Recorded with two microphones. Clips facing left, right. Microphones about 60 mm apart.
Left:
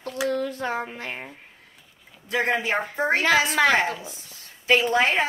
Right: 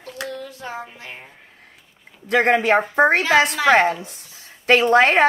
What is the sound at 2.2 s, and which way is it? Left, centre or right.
A woman's voice, right.